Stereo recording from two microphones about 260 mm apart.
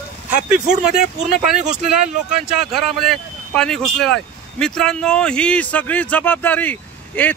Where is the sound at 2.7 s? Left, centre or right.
Centre.